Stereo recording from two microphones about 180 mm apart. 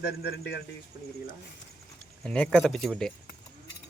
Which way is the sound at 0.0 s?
65° left (ahead or behind).